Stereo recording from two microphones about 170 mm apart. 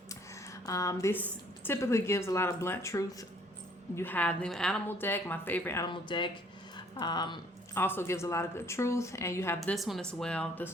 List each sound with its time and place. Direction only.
0.1 s a sound: 20° left (ahead or behind)
1.6 s a woman's voice: 15° left (ahead or behind)
5.8 s a woman's voice: 30° left (ahead or behind)
7.8 s a woman's voice: 15° left (ahead or behind)
9.6 s speech: centre (ahead or behind)